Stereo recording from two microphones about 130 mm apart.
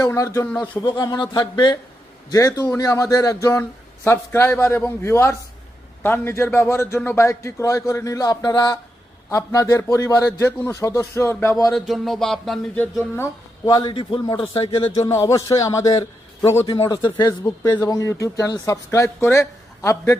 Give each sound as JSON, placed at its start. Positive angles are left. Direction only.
{"t": 0.0, "sound": "a man's voice", "side_deg": 25}
{"t": 0.4, "sound": "speech", "side_deg": 10}
{"t": 0.7, "sound": "a man's voice", "side_deg": 35}
{"t": 11.7, "sound": "speech", "side_deg": 0}
{"t": 12.7, "sound": "speech", "side_deg": 15}
{"t": 13.7, "sound": "a man's voice", "side_deg": 30}
{"t": 13.9, "sound": "a man's voice", "side_deg": 40}
{"t": 15.1, "sound": "a man's voice", "side_deg": 25}
{"t": 16.9, "sound": "a man's voice", "side_deg": 30}